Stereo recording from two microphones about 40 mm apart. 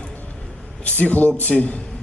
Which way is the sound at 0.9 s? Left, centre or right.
Left.